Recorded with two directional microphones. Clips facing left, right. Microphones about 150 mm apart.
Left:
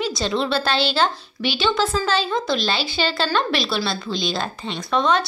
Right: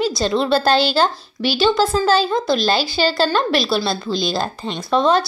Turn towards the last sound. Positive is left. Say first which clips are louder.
# right 4 dB
turn(degrees=-35)  # may be behind; listen again after turning